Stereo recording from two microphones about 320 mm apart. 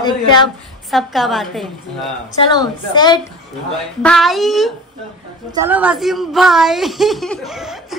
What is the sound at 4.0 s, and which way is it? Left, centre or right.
A woman's voice, centre.